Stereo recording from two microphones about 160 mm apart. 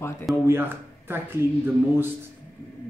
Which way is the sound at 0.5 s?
15° right (ahead or behind).